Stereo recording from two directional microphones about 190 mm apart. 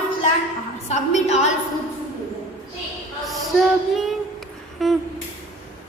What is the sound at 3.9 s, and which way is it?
Child singing, centre (ahead or behind).